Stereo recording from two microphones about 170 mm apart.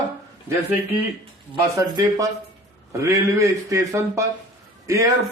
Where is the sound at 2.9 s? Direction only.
20° right (ahead or behind).